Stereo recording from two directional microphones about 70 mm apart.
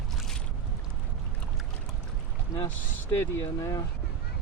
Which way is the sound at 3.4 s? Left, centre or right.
Left.